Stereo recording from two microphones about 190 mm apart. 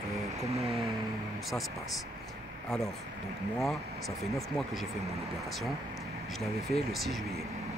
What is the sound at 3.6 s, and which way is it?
Speech, centre (ahead or behind).